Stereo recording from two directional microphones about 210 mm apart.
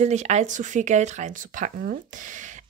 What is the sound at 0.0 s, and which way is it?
Speech, 35° right (ahead or behind).